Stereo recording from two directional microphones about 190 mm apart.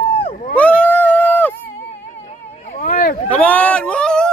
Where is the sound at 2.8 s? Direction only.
45° left (ahead or behind).